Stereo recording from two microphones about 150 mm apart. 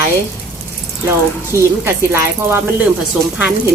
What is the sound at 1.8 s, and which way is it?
Speech, 15° right (ahead or behind).